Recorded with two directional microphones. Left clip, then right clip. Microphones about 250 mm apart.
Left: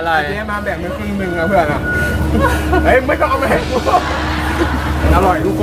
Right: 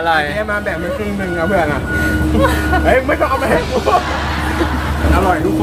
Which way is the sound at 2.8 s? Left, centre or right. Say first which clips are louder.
Left 1 dB; centre.